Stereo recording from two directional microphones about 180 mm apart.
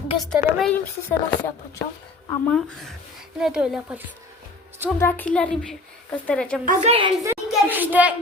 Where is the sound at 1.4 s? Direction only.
15° left (ahead or behind).